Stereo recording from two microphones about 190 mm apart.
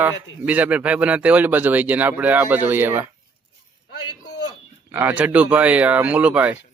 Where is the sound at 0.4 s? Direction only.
10° right (ahead or behind).